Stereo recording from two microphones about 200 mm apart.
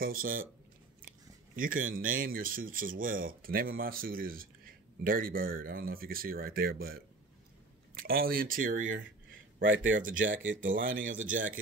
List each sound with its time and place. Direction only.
0.0 s speech: 45° right (ahead or behind)
1.6 s speech: 45° right (ahead or behind)
8.0 s speech: 45° right (ahead or behind)